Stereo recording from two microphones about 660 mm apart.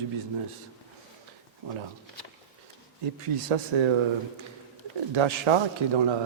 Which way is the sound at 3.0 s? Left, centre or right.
Right.